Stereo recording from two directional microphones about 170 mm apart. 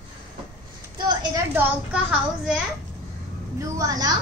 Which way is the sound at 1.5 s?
10° right (ahead or behind).